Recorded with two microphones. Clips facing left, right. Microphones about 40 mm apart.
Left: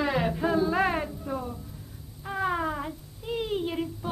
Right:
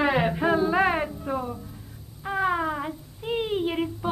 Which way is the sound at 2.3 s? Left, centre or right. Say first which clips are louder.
Right 3 dB; centre.